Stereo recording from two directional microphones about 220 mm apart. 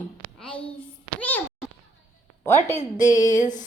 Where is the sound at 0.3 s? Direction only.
5° left (ahead or behind).